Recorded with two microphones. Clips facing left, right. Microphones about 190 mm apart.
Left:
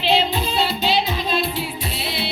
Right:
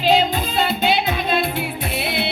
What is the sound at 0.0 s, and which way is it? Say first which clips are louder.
Music: right 2 dB; 45° right (ahead or behind).